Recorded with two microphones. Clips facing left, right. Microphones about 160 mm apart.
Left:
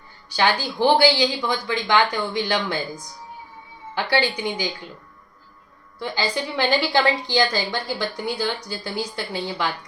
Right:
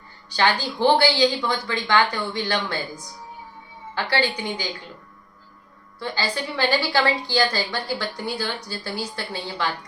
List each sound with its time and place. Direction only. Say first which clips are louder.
0.3 s a woman's voice: left 1 dB; 10° left (ahead or behind)
4.1 s a woman's voice: left 2 dB; 15° left (ahead or behind)
6.0 s a woman's voice: left 2 dB; 15° left (ahead or behind)